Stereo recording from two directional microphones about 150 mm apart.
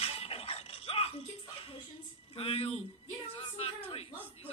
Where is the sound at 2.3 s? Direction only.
40° left (ahead or behind).